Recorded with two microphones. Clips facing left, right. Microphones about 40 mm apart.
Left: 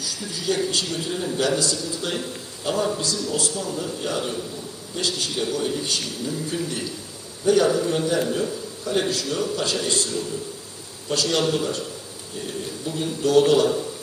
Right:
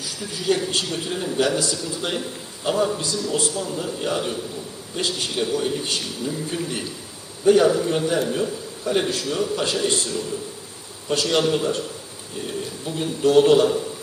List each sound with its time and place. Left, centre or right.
0.0 s a man's voice: right
2.6 s a man's voice: centre
3.0 s a man's voice: right
12.8 s a man's voice: right